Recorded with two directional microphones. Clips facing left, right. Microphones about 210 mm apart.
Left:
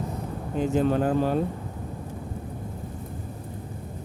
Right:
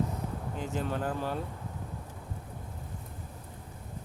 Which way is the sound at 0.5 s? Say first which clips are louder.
Left 12 dB; 20° left (ahead or behind).